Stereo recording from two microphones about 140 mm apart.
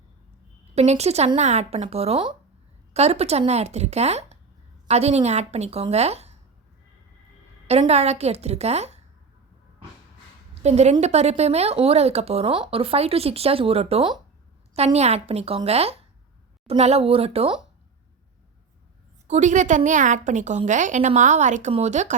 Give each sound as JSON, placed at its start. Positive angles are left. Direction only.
{"t": 0.8, "sound": "speech", "side_deg": -50}
{"t": 7.7, "sound": "speech", "side_deg": -50}
{"t": 10.5, "sound": "a woman's voice", "side_deg": -50}
{"t": 19.3, "sound": "a woman's voice", "side_deg": -60}